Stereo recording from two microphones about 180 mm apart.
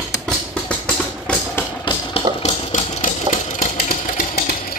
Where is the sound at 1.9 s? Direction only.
25° left (ahead or behind).